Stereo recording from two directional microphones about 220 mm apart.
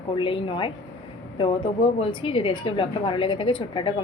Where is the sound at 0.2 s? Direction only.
25° left (ahead or behind).